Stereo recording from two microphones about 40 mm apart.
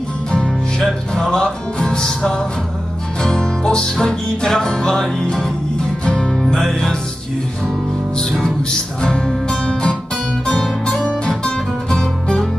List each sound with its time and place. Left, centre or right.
0.7 s music: centre
6.4 s music: centre
8.2 s music: centre
11.1 s music: left